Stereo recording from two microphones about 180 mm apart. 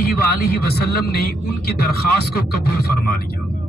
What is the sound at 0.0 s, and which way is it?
A man's voice, 60° left (ahead or behind).